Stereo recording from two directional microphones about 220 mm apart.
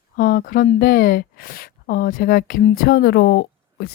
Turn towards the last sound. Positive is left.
turn(degrees=45)  # may be behind; listen again after turning